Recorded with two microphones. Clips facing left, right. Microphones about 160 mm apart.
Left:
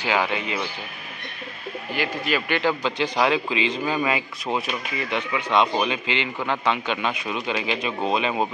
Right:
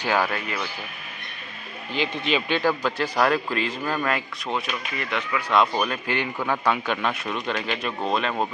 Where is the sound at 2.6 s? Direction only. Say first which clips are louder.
Even; 5° right (ahead or behind).